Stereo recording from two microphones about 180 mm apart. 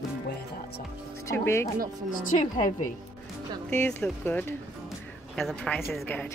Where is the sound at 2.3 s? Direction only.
45° left (ahead or behind).